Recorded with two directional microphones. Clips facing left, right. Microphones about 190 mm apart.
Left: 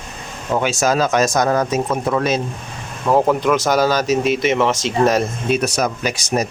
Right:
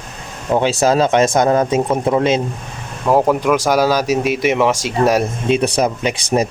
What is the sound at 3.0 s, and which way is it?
Speech, 5° right (ahead or behind).